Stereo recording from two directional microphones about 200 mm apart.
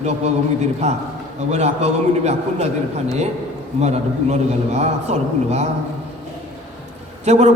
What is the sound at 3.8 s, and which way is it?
A man's voice, 35° right (ahead or behind).